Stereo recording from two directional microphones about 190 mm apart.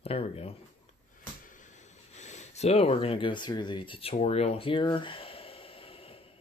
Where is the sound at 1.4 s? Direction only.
40° left (ahead or behind).